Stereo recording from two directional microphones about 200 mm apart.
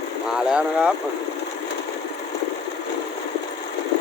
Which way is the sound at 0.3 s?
5° right (ahead or behind).